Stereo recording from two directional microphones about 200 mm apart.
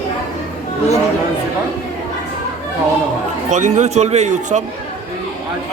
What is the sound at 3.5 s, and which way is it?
A man's voice, 35° right (ahead or behind).